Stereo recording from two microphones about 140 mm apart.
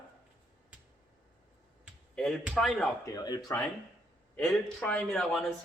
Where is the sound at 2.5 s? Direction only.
5° left (ahead or behind).